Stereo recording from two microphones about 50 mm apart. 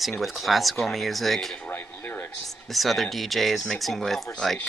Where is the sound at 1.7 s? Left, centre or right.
Left.